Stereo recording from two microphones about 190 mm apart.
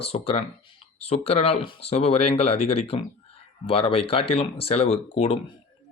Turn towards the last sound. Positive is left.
turn(degrees=30)  # may be behind; listen again after turning